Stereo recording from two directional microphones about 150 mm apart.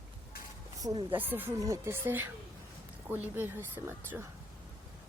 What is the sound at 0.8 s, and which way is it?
Speech, 25° right (ahead or behind).